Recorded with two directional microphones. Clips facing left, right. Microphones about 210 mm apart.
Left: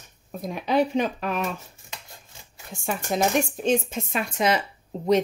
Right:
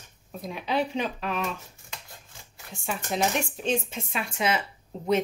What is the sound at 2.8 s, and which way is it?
Speech, 45° left (ahead or behind).